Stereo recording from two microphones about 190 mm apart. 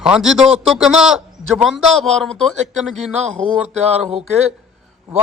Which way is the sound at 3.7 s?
35° right (ahead or behind).